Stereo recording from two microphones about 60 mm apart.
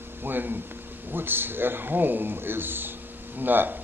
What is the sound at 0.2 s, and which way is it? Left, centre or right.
Speech, right.